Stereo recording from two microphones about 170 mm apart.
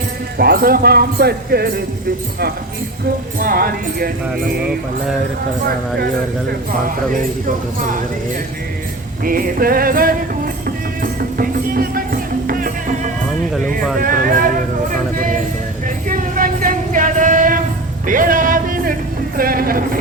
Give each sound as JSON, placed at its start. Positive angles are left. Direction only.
{"t": 0.3, "sound": "speech", "side_deg": -65}
{"t": 3.3, "sound": "speech", "side_deg": -60}
{"t": 7.1, "sound": "speech", "side_deg": -50}
{"t": 9.2, "sound": "speech", "side_deg": -60}
{"t": 11.0, "sound": "music", "side_deg": -60}
{"t": 16.0, "sound": "a sound", "side_deg": -55}